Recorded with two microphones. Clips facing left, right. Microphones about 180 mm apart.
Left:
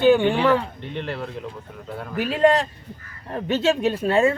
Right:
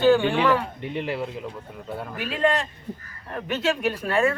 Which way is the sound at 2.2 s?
40° left (ahead or behind).